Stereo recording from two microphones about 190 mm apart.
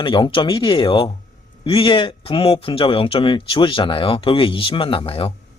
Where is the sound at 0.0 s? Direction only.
25° left (ahead or behind).